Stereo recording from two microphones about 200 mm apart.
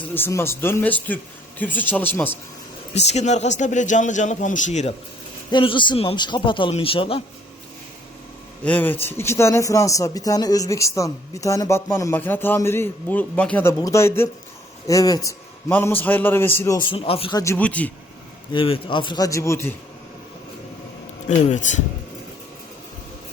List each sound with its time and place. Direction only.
0.1 s a man's voice: 10° left (ahead or behind)
2.9 s a man's voice: 35° left (ahead or behind)
5.5 s speech: 25° left (ahead or behind)
8.6 s a man's voice: 10° left (ahead or behind); by 17.4 s 25° left (ahead or behind)
17.4 s a man's voice: 10° left (ahead or behind)
18.5 s speech: 25° left (ahead or behind)
21.2 s a man's voice: 40° left (ahead or behind)